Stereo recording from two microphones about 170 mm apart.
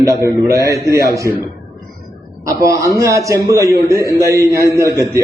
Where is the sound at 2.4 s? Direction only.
20° right (ahead or behind).